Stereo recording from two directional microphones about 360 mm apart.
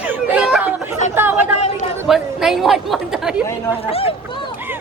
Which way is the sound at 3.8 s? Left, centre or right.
Centre.